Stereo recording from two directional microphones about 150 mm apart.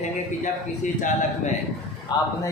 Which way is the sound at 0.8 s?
55° left (ahead or behind).